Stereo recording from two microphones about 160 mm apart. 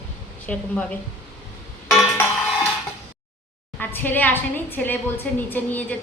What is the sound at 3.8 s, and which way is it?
Dishes, 10° left (ahead or behind).